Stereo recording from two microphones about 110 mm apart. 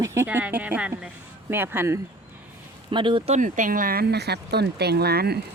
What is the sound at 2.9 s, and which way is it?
Speech, 45° right (ahead or behind).